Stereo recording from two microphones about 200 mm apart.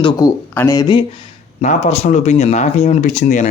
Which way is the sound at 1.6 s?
35° left (ahead or behind).